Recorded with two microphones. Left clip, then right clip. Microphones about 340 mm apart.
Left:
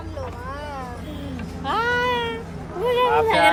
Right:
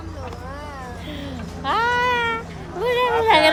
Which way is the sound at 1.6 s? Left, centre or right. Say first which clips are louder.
Right 2 dB; centre.